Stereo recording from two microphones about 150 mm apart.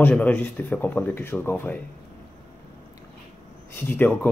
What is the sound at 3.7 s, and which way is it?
Speech, 10° left (ahead or behind).